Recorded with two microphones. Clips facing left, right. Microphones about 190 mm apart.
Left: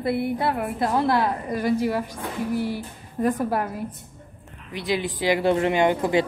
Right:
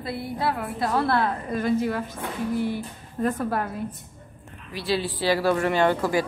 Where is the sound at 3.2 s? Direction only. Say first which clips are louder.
Left 2 dB; 15° left (ahead or behind).